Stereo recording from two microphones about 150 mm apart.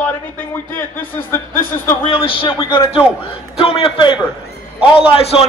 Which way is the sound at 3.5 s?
40° left (ahead or behind).